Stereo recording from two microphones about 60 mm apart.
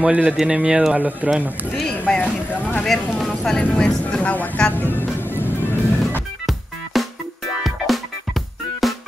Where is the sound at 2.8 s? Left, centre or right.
Centre.